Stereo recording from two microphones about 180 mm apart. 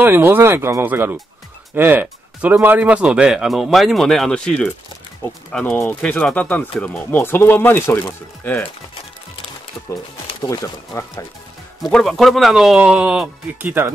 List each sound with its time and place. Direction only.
0.0 s speech: 10° right (ahead or behind); by 8.6 s 10° left (ahead or behind)
10.2 s speech: 20° left (ahead or behind)
11.8 s speech: centre (ahead or behind)